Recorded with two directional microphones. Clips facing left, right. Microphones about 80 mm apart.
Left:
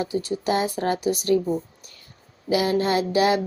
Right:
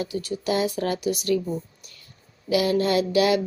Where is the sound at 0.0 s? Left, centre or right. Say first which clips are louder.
Left 3 dB; left.